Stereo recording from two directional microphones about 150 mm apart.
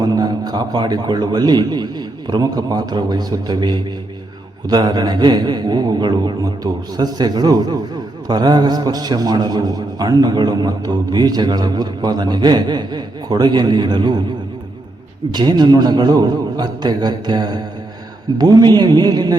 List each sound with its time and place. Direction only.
0.0 s a man's voice: 25° right (ahead or behind)
15.3 s a man's voice: 30° right (ahead or behind)